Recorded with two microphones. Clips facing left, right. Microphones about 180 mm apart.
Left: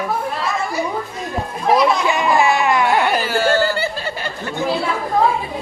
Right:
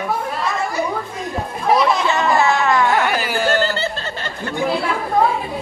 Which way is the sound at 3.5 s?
15° left (ahead or behind).